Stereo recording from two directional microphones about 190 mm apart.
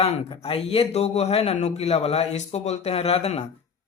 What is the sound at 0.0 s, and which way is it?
Speech, 30° left (ahead or behind).